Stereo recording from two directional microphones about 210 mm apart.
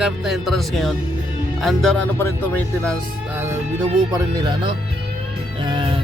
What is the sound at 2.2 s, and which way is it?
Speech, 10° left (ahead or behind).